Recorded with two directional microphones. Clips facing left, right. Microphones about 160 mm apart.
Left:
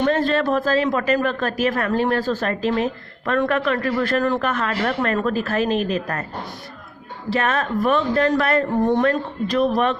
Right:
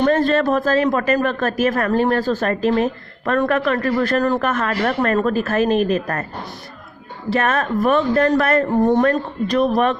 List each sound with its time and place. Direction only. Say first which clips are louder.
0.0 s speech: right 3 dB; 45° right (ahead or behind)
7.3 s speech: right 2 dB; 45° right (ahead or behind)